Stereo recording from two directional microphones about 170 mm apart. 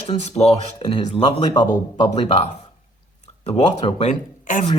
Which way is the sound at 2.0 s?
35° left (ahead or behind).